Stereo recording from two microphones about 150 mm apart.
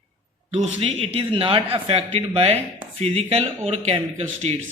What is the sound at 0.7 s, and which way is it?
Speech, 40° right (ahead or behind).